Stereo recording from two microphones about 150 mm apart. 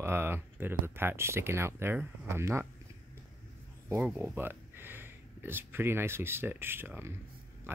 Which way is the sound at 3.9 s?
10° right (ahead or behind).